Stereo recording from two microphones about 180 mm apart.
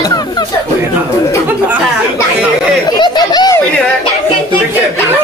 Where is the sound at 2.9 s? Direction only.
25° left (ahead or behind).